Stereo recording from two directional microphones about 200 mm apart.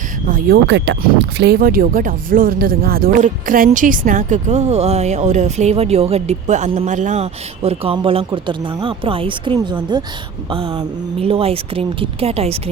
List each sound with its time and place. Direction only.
0.3 s speech: 50° right (ahead or behind); by 12.7 s 30° right (ahead or behind)